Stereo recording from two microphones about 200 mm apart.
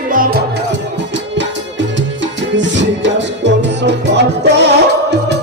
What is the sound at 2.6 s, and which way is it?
Music, 65° right (ahead or behind).